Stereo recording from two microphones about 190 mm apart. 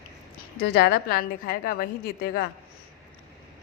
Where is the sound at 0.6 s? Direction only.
55° left (ahead or behind).